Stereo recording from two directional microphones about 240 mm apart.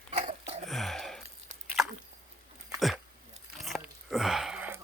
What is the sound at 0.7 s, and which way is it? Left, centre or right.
Gasp, centre.